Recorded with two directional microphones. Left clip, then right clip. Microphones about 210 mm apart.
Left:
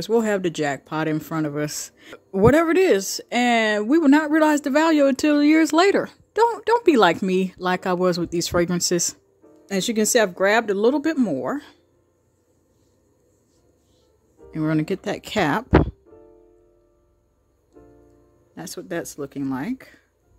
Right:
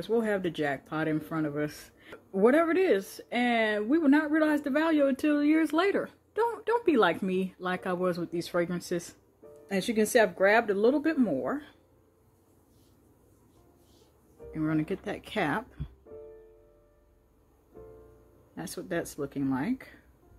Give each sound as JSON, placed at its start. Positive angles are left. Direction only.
{"t": 0.0, "sound": "speech", "side_deg": 55}
{"t": 14.5, "sound": "speech", "side_deg": 50}
{"t": 18.5, "sound": "speech", "side_deg": 55}